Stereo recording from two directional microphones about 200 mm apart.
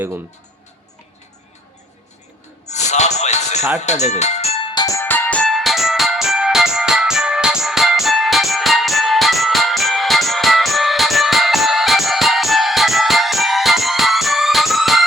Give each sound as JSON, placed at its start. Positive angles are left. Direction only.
{"t": 2.6, "sound": "music", "side_deg": 35}